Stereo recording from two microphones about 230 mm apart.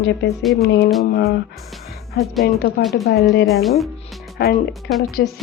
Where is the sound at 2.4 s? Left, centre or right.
Left.